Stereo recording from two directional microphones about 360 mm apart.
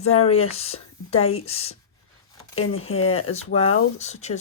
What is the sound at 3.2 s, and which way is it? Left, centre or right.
Speech, centre.